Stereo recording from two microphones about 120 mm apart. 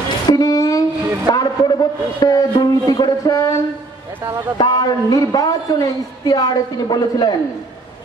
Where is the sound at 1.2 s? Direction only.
35° left (ahead or behind).